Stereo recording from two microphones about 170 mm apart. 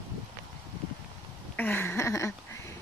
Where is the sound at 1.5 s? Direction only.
10° left (ahead or behind).